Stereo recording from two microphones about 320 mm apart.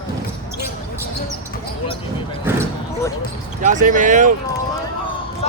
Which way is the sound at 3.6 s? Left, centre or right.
Right.